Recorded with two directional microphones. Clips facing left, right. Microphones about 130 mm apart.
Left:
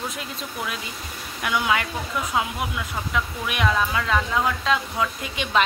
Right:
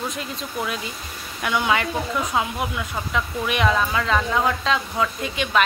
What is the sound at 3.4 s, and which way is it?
Speech, 5° left (ahead or behind).